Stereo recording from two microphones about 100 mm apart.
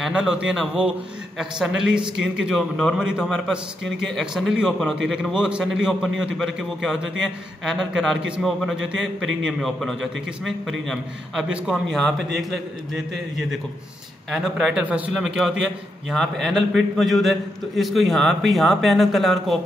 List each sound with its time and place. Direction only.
0.1 s a man's voice: 10° right (ahead or behind)